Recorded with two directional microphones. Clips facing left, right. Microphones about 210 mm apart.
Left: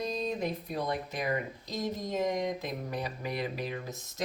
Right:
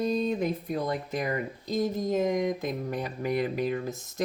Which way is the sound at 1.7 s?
50° right (ahead or behind).